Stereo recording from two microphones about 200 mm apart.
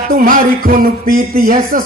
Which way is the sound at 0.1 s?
45° right (ahead or behind).